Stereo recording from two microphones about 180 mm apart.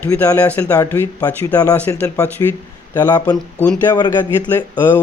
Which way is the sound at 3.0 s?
20° left (ahead or behind).